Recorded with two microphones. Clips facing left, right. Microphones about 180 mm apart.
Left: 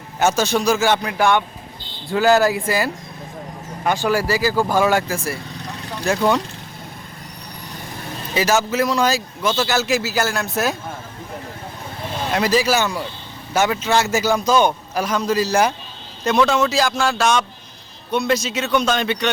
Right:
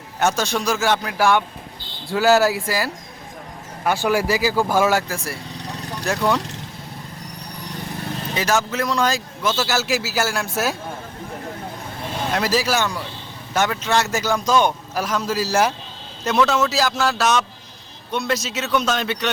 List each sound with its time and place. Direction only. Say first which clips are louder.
0.2 s a man's voice: left 3 dB; centre (ahead or behind)
4.0 s a man's voice: even; 15° right (ahead or behind)
8.4 s a man's voice: left 4 dB; 5° left (ahead or behind)
12.3 s a man's voice: left 3 dB; centre (ahead or behind)